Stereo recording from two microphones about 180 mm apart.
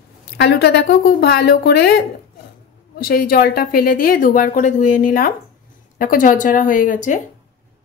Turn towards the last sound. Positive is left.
turn(degrees=45)  # may be behind; listen again after turning